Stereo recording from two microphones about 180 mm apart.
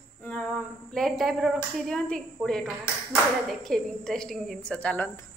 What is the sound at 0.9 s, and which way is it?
A woman's voice, centre (ahead or behind).